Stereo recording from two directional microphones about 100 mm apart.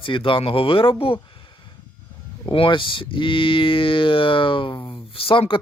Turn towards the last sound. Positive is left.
turn(degrees=60)  # may be behind; listen again after turning